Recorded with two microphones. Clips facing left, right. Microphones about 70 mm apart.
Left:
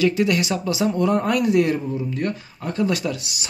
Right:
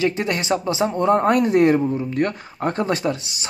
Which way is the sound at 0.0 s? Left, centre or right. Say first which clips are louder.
Left 2 dB; right.